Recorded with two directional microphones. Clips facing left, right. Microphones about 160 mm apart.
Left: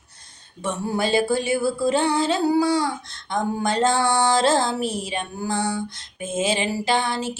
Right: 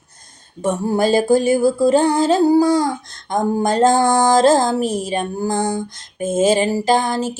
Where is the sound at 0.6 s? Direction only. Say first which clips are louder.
Right 7 dB; 45° right (ahead or behind).